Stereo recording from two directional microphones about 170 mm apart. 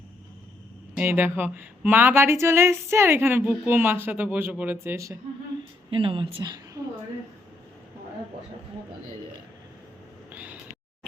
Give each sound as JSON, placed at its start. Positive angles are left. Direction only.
{"t": 0.9, "sound": "a woman's voice", "side_deg": -10}
{"t": 5.9, "sound": "speech", "side_deg": -30}
{"t": 10.3, "sound": "a sound", "side_deg": -10}